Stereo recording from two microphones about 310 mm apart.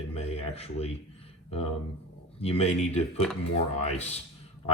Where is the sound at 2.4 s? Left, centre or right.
Centre.